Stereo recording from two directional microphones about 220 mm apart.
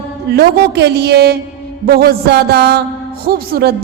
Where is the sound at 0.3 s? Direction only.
45° right (ahead or behind).